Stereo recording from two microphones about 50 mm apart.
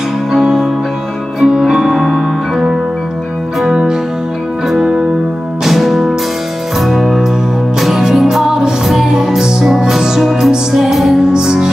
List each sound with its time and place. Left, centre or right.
0.3 s music: centre
1.4 s music: centre
5.6 s music: centre